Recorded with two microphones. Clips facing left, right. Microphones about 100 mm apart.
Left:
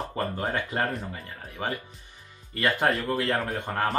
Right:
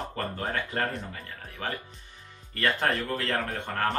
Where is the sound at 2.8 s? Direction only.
5° left (ahead or behind).